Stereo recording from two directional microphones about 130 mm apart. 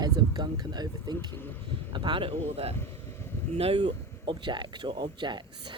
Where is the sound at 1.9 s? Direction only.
40° right (ahead or behind).